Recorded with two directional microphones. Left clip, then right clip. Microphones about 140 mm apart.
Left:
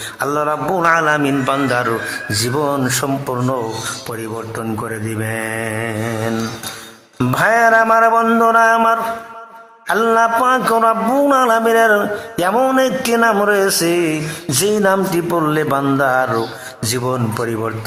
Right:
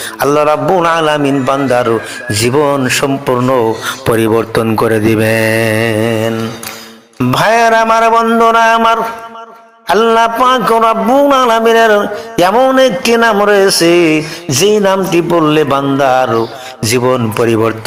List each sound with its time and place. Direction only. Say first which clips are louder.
0.2 s a man's voice: right 8 dB; 25° right (ahead or behind)
4.1 s speech: right 14 dB; 55° right (ahead or behind)
7.3 s a man's voice: right 4 dB; 20° right (ahead or behind)